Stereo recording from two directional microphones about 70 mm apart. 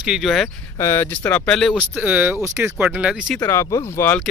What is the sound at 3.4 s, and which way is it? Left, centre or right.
Speech, left.